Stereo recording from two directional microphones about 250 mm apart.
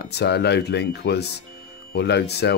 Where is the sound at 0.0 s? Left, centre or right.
Left.